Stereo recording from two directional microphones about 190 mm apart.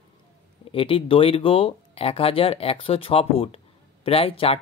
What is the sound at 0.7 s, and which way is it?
Speech, 30° left (ahead or behind).